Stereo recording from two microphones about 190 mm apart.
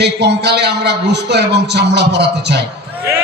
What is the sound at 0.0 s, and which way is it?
A man's voice, 60° right (ahead or behind).